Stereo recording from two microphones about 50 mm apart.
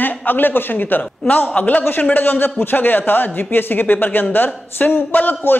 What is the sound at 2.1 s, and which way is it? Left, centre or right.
A man's voice, left.